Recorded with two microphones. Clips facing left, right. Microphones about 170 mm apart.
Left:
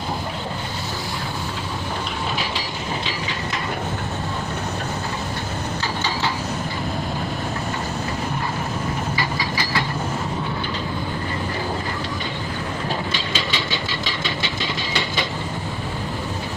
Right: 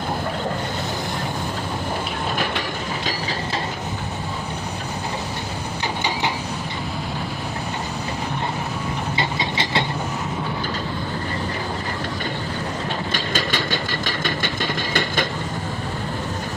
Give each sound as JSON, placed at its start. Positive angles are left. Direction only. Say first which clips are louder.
{"t": 9.1, "sound": "train", "louder": "right 1 dB", "side_deg": -25}
{"t": 13.1, "sound": "engine", "louder": "right 2 dB", "side_deg": -50}